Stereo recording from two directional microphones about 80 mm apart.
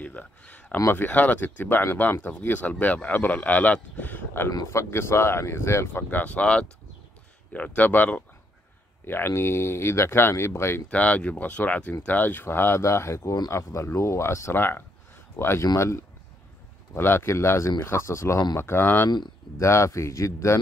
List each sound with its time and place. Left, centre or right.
0.0 s speech: centre
4.6 s speech: left
6.0 s speech: centre
10.9 s speech: centre; by 15.6 s left
15.6 s speech: left
19.0 s speech: left
19.6 s speech: left